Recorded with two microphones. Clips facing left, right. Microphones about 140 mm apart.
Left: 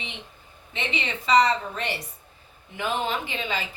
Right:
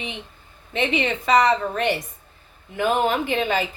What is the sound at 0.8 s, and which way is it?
A woman's voice, 55° right (ahead or behind).